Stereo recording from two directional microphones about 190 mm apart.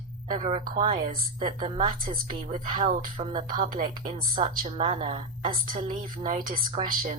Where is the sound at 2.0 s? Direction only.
50° right (ahead or behind).